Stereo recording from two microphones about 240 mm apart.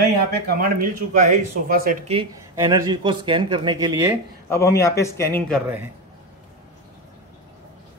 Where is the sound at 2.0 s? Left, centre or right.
Right.